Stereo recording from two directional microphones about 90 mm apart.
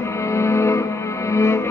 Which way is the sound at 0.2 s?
30° left (ahead or behind).